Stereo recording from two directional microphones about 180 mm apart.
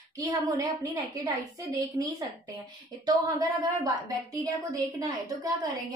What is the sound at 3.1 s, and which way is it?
A woman's voice, 20° right (ahead or behind).